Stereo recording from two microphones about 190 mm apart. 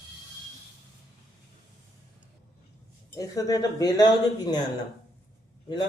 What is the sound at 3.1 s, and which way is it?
Speech, 20° left (ahead or behind).